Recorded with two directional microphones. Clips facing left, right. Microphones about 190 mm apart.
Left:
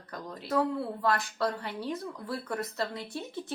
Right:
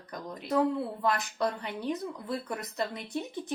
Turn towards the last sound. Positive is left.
turn(degrees=-20)  # may be behind; listen again after turning